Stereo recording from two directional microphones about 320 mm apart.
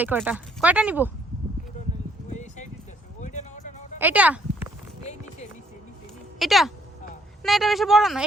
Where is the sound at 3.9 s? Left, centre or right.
Centre.